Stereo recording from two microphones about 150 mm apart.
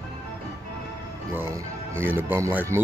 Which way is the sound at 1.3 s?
15° right (ahead or behind).